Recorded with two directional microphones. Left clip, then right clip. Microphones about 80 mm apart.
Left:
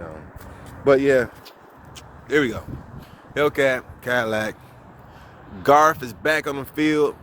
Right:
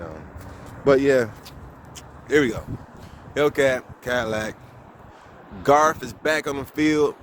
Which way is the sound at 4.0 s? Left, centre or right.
Left.